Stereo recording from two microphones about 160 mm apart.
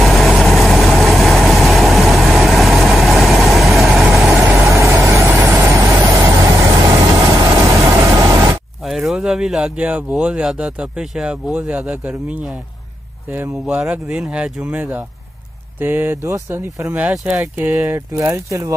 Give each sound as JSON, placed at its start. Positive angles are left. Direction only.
{"t": 0.0, "sound": "vehicle", "side_deg": 0}
{"t": 4.3, "sound": "vehicle", "side_deg": -15}
{"t": 8.8, "sound": "speech", "side_deg": 0}